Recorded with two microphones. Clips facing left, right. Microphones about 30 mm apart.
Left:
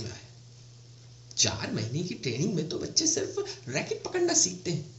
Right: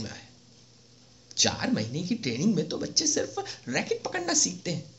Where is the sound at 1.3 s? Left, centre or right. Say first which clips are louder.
Right 1 dB; right.